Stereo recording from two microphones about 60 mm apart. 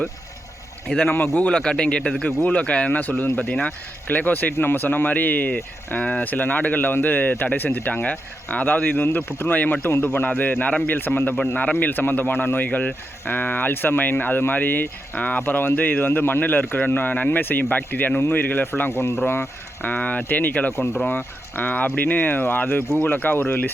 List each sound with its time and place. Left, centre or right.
1.4 s a man's voice: centre
4.1 s speech: left
8.0 s speech: left
11.5 s speech: left
11.9 s speech: left
19.9 s speech: left
20.7 s speech: left
21.1 s speech: left